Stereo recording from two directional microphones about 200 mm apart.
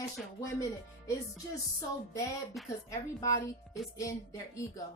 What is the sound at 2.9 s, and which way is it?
A woman's voice, 15° left (ahead or behind).